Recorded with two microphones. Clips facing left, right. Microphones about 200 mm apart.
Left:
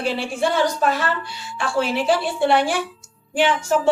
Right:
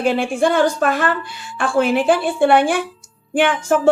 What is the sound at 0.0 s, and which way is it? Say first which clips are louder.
A woman's voice: right 5 dB; 50° right (ahead or behind).